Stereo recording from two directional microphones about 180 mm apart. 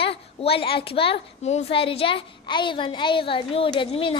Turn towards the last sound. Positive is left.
turn(degrees=30)  # may be behind; listen again after turning